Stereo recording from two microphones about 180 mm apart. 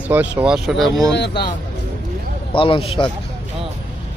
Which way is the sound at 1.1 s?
65° left (ahead or behind).